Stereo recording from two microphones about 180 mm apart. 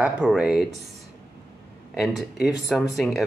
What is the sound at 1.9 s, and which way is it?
Speech, centre (ahead or behind).